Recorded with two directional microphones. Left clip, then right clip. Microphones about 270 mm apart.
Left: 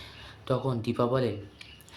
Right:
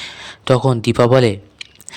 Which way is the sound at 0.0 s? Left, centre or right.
Right.